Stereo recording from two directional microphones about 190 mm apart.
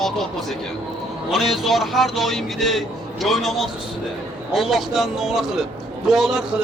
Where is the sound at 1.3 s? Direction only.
Centre (ahead or behind).